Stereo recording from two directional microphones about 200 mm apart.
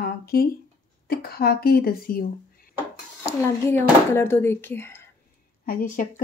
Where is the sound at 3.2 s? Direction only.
15° left (ahead or behind).